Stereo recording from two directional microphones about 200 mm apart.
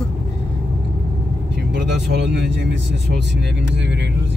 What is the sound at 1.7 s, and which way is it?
Speech, 60° right (ahead or behind).